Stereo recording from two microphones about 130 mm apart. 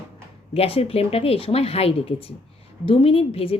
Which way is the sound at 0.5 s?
50° left (ahead or behind).